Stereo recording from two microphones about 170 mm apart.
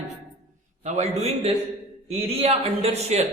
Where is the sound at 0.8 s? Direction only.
45° right (ahead or behind).